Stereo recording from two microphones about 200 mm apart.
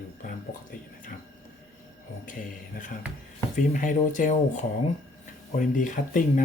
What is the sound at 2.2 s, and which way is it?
Speech, 40° left (ahead or behind).